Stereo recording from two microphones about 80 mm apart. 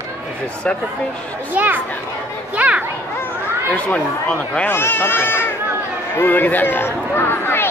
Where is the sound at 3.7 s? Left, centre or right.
Centre.